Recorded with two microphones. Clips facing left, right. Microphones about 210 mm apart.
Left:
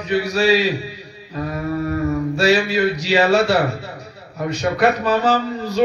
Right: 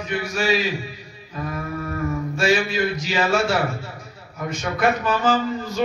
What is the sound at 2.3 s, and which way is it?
A man's voice, 35° left (ahead or behind).